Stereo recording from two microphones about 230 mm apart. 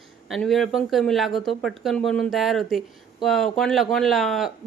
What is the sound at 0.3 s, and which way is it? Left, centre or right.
Speech, centre.